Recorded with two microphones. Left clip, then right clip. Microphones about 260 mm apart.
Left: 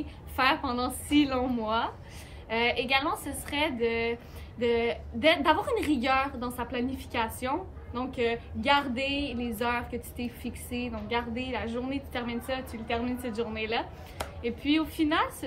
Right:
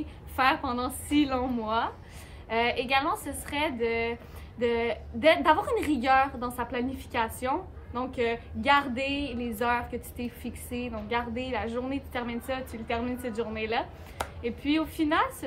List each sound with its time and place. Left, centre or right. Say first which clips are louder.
0.4 s a woman's voice: right 1 dB; centre